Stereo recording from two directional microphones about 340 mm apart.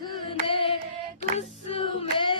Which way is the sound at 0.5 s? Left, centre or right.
Centre.